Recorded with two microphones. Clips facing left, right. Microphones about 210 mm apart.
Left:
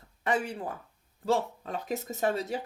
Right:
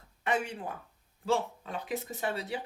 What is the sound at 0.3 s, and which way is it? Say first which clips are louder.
Speech: left 2 dB; 35° left (ahead or behind).